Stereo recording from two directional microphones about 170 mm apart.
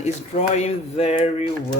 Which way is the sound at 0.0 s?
45° left (ahead or behind).